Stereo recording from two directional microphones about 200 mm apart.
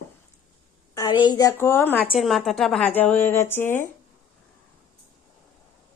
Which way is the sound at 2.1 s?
Centre (ahead or behind).